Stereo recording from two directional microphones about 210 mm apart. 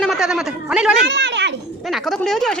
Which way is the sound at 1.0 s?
55° right (ahead or behind).